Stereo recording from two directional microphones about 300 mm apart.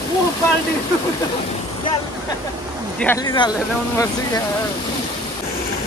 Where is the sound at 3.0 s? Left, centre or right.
Centre.